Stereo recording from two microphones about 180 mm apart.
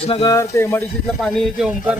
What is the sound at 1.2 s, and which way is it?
Speech, centre (ahead or behind).